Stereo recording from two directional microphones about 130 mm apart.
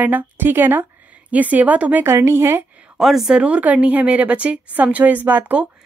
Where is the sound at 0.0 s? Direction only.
10° right (ahead or behind).